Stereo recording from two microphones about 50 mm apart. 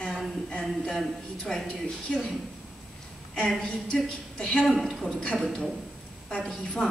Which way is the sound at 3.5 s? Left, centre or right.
Centre.